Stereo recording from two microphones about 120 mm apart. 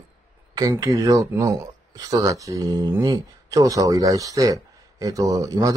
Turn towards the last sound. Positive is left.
turn(degrees=-30)  # may be behind; listen again after turning